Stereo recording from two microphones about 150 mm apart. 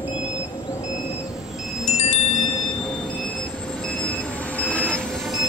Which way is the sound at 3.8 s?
5° left (ahead or behind).